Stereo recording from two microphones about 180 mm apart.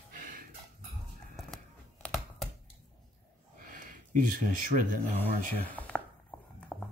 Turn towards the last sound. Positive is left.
turn(degrees=0)  # may be behind; listen again after turning